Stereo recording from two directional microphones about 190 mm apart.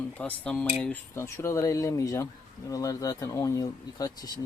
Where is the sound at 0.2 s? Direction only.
5° left (ahead or behind).